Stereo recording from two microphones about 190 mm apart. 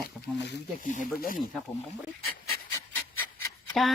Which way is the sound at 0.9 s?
45° left (ahead or behind).